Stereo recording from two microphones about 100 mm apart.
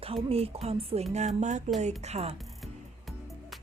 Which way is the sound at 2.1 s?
90° right.